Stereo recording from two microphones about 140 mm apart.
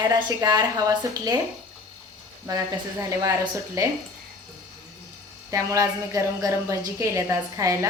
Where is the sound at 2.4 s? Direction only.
25° right (ahead or behind).